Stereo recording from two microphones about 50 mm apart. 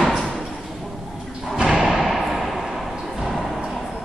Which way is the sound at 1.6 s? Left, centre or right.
Centre.